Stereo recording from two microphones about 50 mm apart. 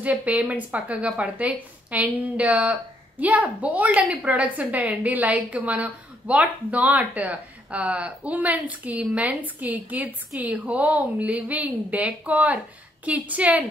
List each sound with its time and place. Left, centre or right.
0.0 s a woman's voice: right